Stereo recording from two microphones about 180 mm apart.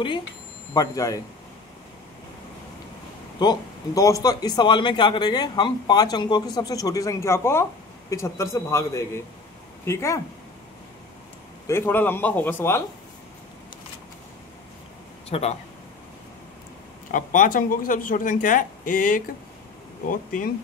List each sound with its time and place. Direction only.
0.7 s a man's voice: 20° left (ahead or behind)
3.3 s a man's voice: 20° left (ahead or behind)
11.6 s a man's voice: 15° left (ahead or behind)
15.2 s speech: 35° left (ahead or behind)
17.1 s speech: 50° left (ahead or behind)